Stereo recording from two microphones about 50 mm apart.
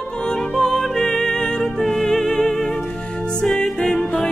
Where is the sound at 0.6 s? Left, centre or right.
Centre.